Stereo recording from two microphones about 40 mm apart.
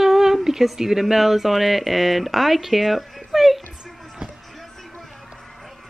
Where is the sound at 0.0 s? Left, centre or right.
Centre.